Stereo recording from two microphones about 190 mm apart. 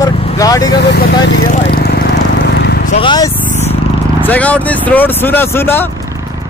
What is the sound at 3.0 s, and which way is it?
Speech, 20° left (ahead or behind).